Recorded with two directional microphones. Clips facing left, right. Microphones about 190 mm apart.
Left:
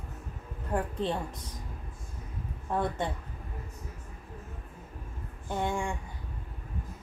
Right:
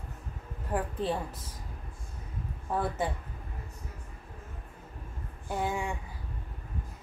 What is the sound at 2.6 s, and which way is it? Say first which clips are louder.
Speech: even; 5° right (ahead or behind).